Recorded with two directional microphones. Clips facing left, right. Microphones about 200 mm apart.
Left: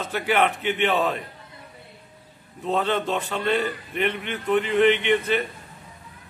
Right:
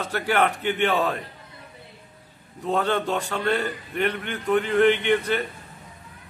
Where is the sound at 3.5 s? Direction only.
10° left (ahead or behind).